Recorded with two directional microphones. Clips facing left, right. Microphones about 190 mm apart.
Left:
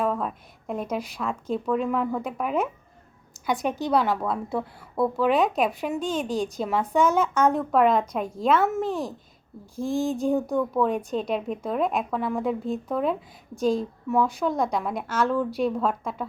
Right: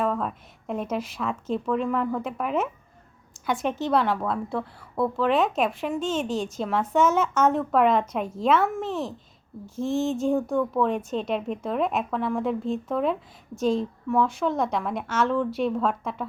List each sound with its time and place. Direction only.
0.0 s a woman's voice: centre (ahead or behind)
3.6 s a woman's voice: 10° left (ahead or behind)